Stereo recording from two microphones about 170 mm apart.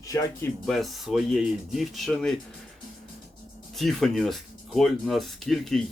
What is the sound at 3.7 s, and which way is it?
Speech, centre (ahead or behind).